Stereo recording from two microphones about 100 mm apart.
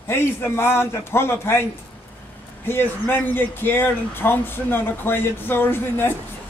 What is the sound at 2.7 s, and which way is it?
Speech, 20° left (ahead or behind).